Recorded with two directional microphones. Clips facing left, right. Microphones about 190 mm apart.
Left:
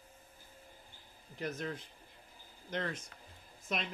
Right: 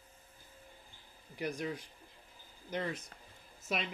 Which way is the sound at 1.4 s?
10° right (ahead or behind).